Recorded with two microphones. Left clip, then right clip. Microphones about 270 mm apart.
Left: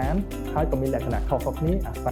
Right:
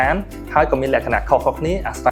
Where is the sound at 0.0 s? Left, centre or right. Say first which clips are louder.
Right 10 dB; centre.